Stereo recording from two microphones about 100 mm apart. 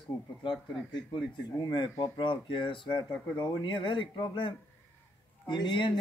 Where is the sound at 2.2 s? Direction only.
55° left (ahead or behind).